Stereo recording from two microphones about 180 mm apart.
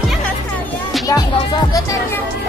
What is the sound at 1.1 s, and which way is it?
Music, 20° left (ahead or behind).